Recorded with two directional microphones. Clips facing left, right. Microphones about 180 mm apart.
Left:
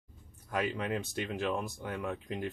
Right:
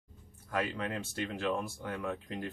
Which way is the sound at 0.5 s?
15° left (ahead or behind).